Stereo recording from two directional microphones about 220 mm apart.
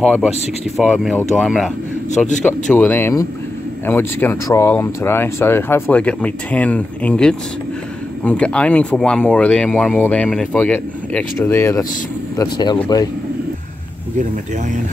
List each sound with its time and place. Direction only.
0.7 s speech: centre (ahead or behind)
2.0 s a man's voice: 35° left (ahead or behind)
2.7 s speech: 10° left (ahead or behind)